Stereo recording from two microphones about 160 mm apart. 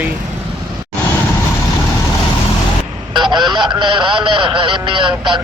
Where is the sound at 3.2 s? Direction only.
30° right (ahead or behind).